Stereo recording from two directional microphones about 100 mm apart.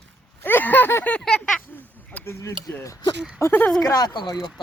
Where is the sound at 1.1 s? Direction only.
5° left (ahead or behind).